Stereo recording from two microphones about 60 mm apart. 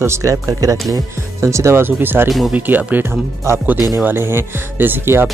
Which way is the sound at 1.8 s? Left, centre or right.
Right.